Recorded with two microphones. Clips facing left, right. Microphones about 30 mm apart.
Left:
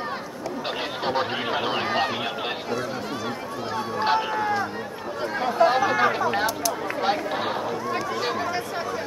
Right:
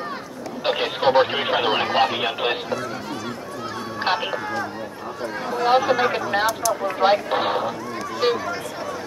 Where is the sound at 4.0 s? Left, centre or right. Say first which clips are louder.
Even; centre.